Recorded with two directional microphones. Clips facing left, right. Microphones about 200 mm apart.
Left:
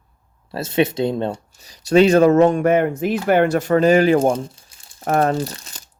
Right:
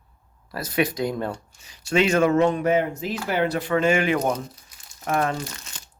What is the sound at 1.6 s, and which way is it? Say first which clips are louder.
Speech: left 8 dB; 40° left (ahead or behind).